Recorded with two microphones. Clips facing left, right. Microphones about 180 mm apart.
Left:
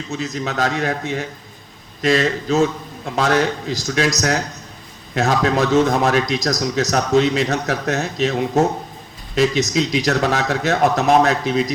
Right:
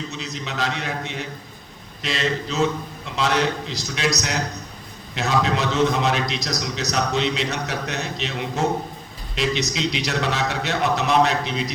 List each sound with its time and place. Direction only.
0.1 s a man's voice: 45° left (ahead or behind)